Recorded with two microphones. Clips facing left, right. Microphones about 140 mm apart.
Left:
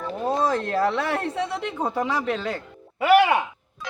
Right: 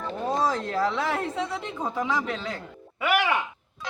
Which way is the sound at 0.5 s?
55° left (ahead or behind).